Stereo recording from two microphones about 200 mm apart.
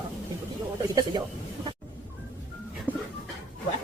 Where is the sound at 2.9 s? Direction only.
10° left (ahead or behind).